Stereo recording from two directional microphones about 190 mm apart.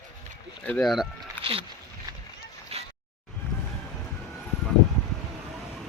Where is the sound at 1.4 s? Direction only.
10° left (ahead or behind).